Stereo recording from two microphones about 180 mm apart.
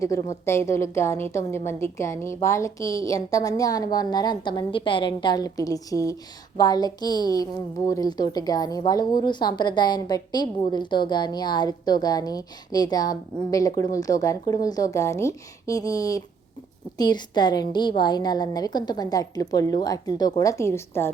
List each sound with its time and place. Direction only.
0.0 s a woman's voice: 15° left (ahead or behind)